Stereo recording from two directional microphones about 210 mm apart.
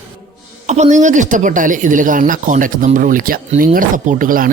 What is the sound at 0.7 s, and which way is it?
Speech, 35° right (ahead or behind).